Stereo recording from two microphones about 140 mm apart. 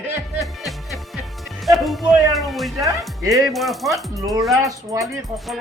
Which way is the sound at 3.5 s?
Centre (ahead or behind).